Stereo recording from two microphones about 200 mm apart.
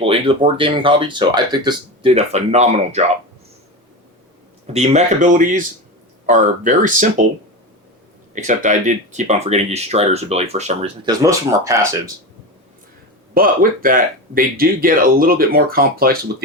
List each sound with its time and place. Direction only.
0.0 s speech: 30° right (ahead or behind)
4.6 s speech: 30° right (ahead or behind)
8.4 s speech: 40° right (ahead or behind)
11.0 s speech: 15° right (ahead or behind)
13.3 s speech: 45° right (ahead or behind)